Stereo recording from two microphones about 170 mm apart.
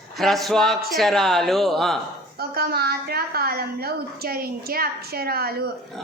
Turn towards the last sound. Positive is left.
turn(degrees=-65)  # may be behind; listen again after turning